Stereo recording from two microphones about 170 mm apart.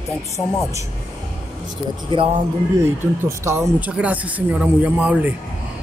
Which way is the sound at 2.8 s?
15° right (ahead or behind).